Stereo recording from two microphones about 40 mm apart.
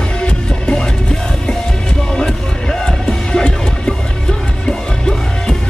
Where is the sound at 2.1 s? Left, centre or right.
Centre.